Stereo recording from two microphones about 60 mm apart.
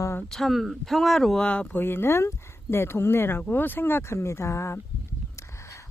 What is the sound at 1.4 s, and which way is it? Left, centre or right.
Speech, left.